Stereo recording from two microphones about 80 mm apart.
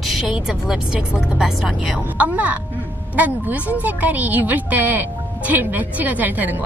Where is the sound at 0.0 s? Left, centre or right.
Centre.